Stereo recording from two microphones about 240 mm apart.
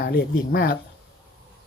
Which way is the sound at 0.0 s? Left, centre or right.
Left.